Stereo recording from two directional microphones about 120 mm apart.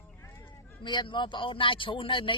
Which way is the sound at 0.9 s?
40° left (ahead or behind).